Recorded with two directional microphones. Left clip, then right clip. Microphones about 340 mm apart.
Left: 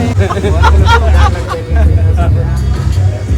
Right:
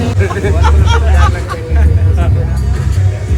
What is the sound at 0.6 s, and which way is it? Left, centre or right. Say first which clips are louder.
Speech: left 5 dB; centre.